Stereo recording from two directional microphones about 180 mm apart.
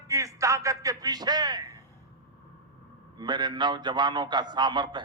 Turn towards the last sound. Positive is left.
turn(degrees=-25)  # may be behind; listen again after turning